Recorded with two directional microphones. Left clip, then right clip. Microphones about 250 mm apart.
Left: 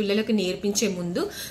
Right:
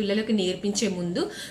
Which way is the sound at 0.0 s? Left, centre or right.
Centre.